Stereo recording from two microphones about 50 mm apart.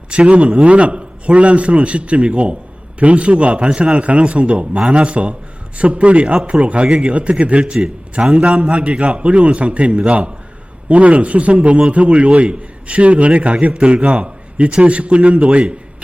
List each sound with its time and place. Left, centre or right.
0.3 s a man's voice: right